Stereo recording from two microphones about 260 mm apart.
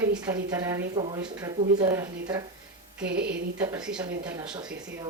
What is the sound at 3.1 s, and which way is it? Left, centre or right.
Speech, right.